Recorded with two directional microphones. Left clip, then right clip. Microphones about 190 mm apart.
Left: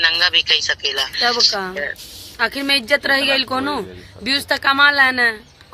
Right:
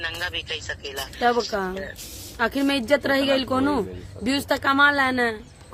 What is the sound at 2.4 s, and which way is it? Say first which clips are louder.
A man's voice: left 5 dB; 20° right (ahead or behind).